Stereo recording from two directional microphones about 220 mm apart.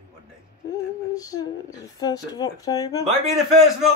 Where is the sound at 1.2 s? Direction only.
15° left (ahead or behind).